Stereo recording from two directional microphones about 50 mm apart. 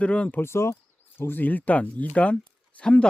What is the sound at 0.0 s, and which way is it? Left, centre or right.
Speech, left.